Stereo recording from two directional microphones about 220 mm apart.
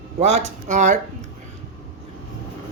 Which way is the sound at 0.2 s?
30° right (ahead or behind).